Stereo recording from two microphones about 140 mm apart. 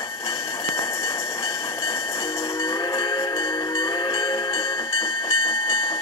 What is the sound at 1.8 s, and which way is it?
Train, 45° left (ahead or behind).